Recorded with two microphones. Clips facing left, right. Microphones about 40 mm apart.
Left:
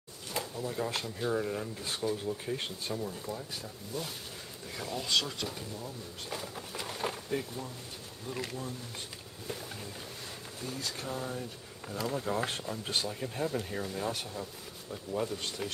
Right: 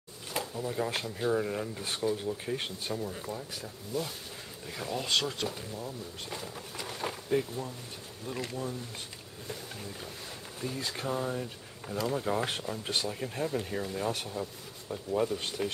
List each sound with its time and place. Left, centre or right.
0.3 s speech: centre
6.3 s speech: centre
10.8 s speech: right
11.8 s speech: centre